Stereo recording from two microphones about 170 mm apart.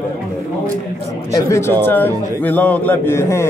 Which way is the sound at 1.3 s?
20° left (ahead or behind).